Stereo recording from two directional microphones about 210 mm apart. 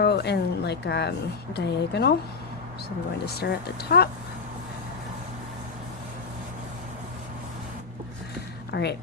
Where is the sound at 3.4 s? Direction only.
50° left (ahead or behind).